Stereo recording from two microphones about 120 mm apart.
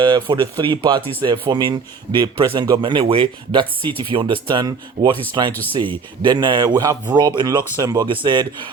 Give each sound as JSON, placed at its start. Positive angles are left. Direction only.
{"t": 0.0, "sound": "speech", "side_deg": -40}
{"t": 5.5, "sound": "speech", "side_deg": 15}
{"t": 5.7, "sound": "speech", "side_deg": -45}